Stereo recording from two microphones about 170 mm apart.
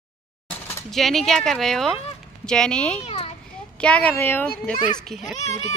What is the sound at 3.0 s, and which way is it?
Children playing, 40° left (ahead or behind).